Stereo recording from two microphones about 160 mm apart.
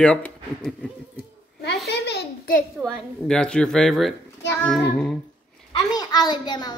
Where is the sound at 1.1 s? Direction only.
85° left.